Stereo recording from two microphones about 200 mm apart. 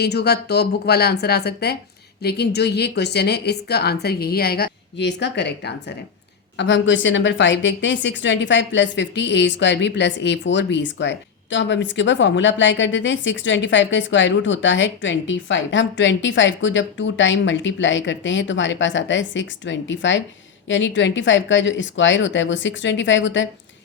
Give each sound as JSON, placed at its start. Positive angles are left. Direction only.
{"t": 0.0, "sound": "a woman's voice", "side_deg": 55}